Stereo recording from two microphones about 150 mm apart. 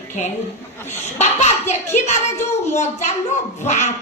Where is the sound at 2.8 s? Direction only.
50° left (ahead or behind).